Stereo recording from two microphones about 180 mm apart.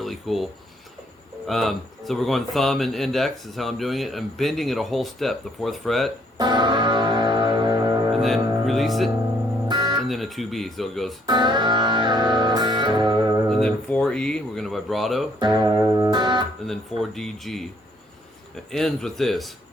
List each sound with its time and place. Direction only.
0.0 s a sound: centre (ahead or behind)
1.5 s speech: centre (ahead or behind)
6.3 s music: 25° right (ahead or behind)
8.1 s speech: centre (ahead or behind)
9.6 s music: 25° right (ahead or behind)
10.1 s speech: centre (ahead or behind)
11.3 s music: 25° right (ahead or behind)
13.5 s speech: 5° left (ahead or behind)
15.4 s music: 25° right (ahead or behind)
16.6 s speech: centre (ahead or behind)
18.7 s speech: 5° left (ahead or behind)